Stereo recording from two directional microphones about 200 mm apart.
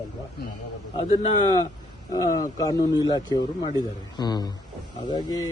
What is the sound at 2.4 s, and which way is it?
Speech, 20° left (ahead or behind).